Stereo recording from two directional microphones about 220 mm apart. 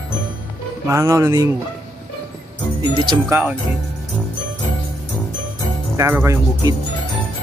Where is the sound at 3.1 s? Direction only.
10° right (ahead or behind).